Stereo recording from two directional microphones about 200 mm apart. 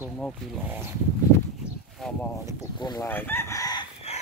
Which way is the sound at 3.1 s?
10° left (ahead or behind).